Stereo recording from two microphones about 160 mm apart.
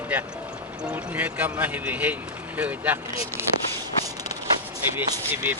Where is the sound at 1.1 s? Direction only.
10° right (ahead or behind).